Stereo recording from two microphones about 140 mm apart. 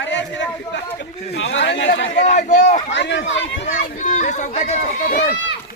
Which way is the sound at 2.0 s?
60° left (ahead or behind).